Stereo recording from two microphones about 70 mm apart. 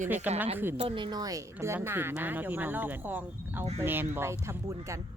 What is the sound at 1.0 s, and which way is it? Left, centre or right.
Speech, right.